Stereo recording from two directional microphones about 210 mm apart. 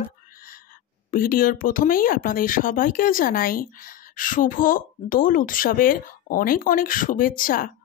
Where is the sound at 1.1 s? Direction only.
45° left (ahead or behind).